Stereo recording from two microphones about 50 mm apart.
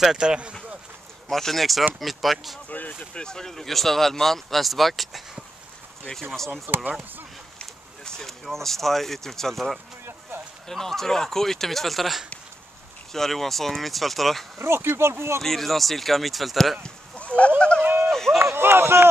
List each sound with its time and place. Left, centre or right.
0.0 s speech: centre
1.3 s speech: centre
3.2 s speech: centre
6.3 s speech: centre
14.6 s speech: right
15.4 s speech: centre
16.8 s a sound: left
17.6 s speech: left
17.8 s a sound: right
18.1 s a sound: centre
18.4 s speech: right